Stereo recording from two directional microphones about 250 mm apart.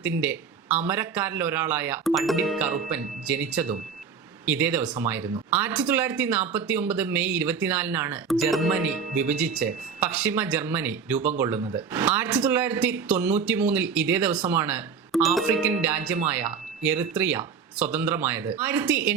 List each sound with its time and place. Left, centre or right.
0.0 s speech: centre
11.6 s speech: centre
11.9 s speech: centre